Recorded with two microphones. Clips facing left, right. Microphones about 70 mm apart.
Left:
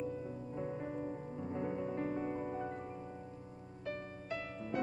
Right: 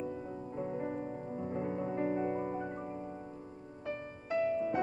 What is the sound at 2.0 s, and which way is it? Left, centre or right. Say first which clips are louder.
Music: right 5 dB; right.